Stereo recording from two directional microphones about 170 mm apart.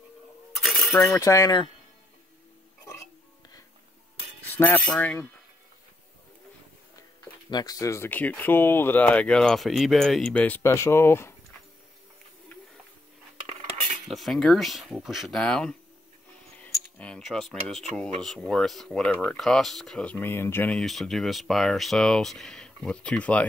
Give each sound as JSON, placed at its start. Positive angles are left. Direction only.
{"t": 0.6, "sound": "coin", "side_deg": 0}
{"t": 1.1, "sound": "wind chime", "side_deg": 20}
{"t": 2.8, "sound": "burping", "side_deg": 15}
{"t": 4.5, "sound": "a sound", "side_deg": 10}
{"t": 4.7, "sound": "speech", "side_deg": 5}
{"t": 7.5, "sound": "speech", "side_deg": 20}
{"t": 14.0, "sound": "speech", "side_deg": 0}
{"t": 16.6, "sound": "cutlery", "side_deg": 5}
{"t": 17.9, "sound": "speech", "side_deg": 5}